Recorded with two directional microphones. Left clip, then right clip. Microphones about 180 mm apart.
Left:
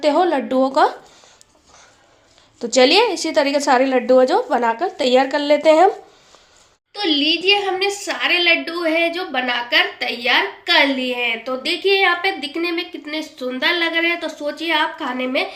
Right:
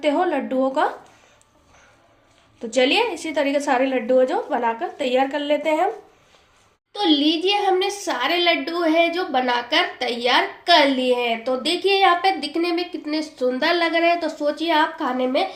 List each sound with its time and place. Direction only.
0.0 s a woman's voice: 40° left (ahead or behind)
2.6 s a woman's voice: 40° left (ahead or behind)
6.9 s a woman's voice: 60° right (ahead or behind)